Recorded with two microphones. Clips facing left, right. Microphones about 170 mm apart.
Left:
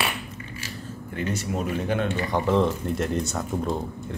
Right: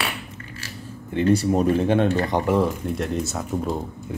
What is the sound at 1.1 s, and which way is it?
Speech, 35° right (ahead or behind).